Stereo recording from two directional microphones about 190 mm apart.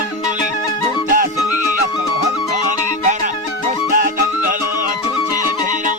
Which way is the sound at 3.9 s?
45° right (ahead or behind).